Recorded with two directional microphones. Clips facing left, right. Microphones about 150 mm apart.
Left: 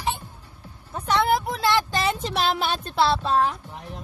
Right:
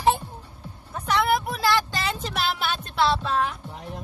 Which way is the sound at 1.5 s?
25° left (ahead or behind).